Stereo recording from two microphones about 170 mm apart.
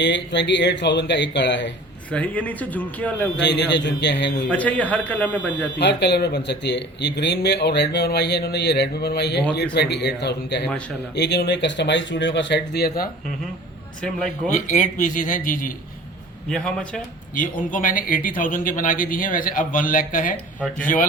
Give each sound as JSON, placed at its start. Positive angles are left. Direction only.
{"t": 0.0, "sound": "speech", "side_deg": 90}
{"t": 2.0, "sound": "speech", "side_deg": 10}
{"t": 3.3, "sound": "speech", "side_deg": 90}
{"t": 4.4, "sound": "speech", "side_deg": 10}
{"t": 5.8, "sound": "speech", "side_deg": 85}
{"t": 14.5, "sound": "a man's voice", "side_deg": 45}
{"t": 16.5, "sound": "a man's voice", "side_deg": 5}
{"t": 17.3, "sound": "a man's voice", "side_deg": 50}